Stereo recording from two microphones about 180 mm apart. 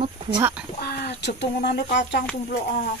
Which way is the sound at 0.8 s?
65° left (ahead or behind).